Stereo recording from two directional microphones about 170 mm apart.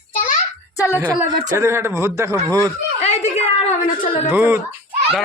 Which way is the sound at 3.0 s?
40° left (ahead or behind).